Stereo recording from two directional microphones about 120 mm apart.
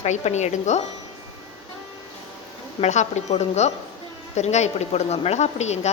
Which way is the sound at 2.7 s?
70° left (ahead or behind).